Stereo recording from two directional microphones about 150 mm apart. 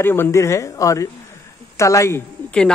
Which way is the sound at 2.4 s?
5° left (ahead or behind).